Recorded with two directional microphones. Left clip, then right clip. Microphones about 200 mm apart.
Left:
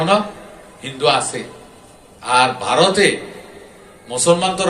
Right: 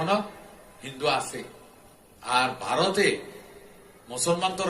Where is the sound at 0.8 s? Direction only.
15° right (ahead or behind).